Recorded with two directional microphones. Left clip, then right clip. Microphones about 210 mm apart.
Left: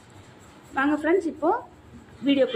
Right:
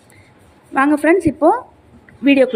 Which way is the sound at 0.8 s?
35° right (ahead or behind).